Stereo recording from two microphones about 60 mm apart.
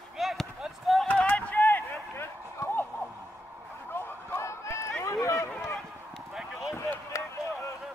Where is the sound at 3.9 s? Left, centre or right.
Left.